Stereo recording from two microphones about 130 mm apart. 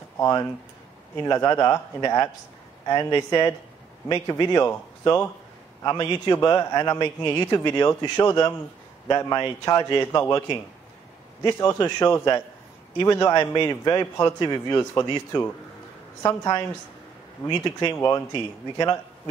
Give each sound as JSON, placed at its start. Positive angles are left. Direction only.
{"t": 1.2, "sound": "a man's voice", "side_deg": 25}
{"t": 11.4, "sound": "a man's voice", "side_deg": 25}
{"t": 17.9, "sound": "a man's voice", "side_deg": 20}